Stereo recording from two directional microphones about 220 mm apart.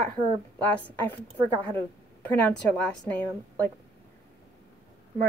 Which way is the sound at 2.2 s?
5° left (ahead or behind).